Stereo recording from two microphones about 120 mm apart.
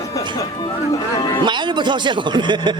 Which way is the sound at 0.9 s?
35° left (ahead or behind).